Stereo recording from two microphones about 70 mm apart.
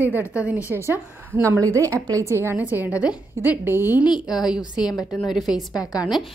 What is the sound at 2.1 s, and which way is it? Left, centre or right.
Speech, right.